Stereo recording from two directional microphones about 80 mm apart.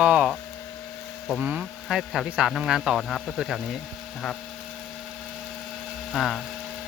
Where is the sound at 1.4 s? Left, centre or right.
Centre.